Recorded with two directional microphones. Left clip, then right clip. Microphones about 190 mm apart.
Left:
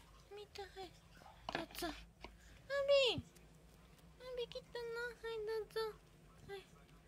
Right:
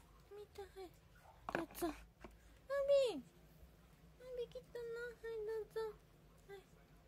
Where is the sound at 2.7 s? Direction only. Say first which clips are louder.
Left 1 dB; 30° right (ahead or behind).